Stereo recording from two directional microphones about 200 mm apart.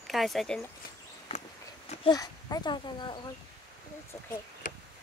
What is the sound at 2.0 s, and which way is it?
Speech, 20° left (ahead or behind).